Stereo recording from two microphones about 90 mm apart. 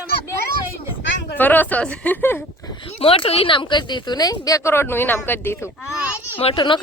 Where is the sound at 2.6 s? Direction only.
50° left (ahead or behind).